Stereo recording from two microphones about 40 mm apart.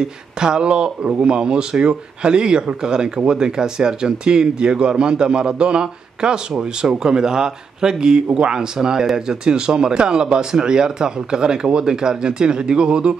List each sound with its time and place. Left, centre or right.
0.0 s speech: centre